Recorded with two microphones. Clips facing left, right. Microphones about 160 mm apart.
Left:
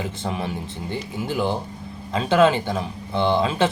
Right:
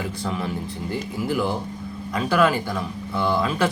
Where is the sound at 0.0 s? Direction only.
25° left (ahead or behind).